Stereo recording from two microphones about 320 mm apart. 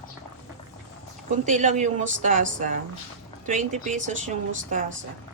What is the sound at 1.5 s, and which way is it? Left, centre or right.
A woman's voice, right.